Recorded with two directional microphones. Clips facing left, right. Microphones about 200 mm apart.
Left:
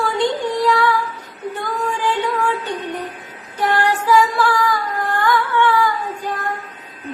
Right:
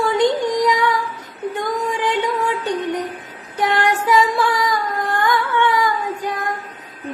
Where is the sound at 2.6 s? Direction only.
20° right (ahead or behind).